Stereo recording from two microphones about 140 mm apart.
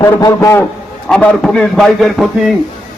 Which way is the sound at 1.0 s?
5° left (ahead or behind).